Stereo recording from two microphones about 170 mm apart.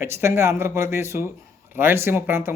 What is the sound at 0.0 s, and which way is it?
Speech, 15° right (ahead or behind).